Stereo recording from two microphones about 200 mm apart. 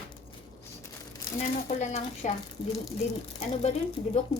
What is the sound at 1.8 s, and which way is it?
Speech, 35° left (ahead or behind).